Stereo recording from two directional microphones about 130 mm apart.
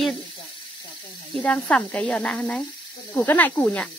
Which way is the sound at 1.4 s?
10° left (ahead or behind).